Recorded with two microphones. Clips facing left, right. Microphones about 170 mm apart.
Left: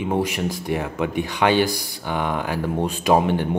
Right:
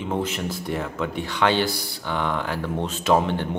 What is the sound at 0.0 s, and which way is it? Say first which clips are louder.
Speech: left 4 dB; 10° left (ahead or behind).